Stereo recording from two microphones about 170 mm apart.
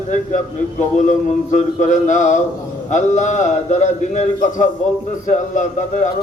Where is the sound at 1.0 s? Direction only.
45° left (ahead or behind).